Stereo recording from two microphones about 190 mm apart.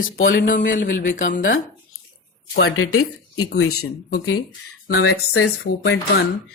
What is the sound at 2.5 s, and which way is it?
Speech, 90° left.